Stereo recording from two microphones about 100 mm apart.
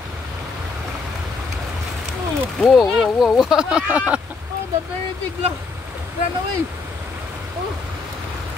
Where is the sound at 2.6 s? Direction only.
Centre (ahead or behind).